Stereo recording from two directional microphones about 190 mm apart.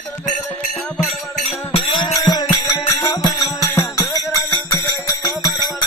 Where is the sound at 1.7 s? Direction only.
25° left (ahead or behind).